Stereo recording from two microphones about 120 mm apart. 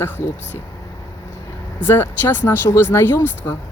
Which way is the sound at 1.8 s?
20° left (ahead or behind).